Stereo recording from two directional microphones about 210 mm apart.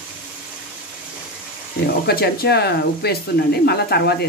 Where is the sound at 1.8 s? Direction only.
45° left (ahead or behind).